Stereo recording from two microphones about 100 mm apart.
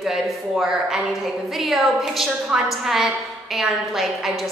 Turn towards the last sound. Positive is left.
turn(degrees=0)  # may be behind; listen again after turning